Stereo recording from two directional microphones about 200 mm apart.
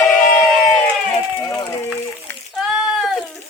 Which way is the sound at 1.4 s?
15° left (ahead or behind).